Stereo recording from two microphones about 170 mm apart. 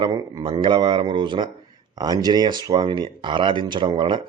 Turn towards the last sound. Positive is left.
turn(degrees=-30)  # may be behind; listen again after turning